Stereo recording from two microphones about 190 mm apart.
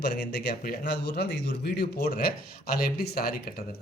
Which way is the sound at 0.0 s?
55° left (ahead or behind).